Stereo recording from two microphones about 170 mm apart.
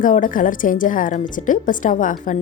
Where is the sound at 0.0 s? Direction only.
50° left (ahead or behind).